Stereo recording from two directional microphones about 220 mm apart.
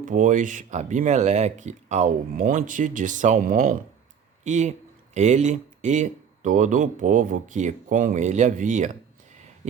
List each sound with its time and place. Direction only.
0.0 s speech: 35° right (ahead or behind)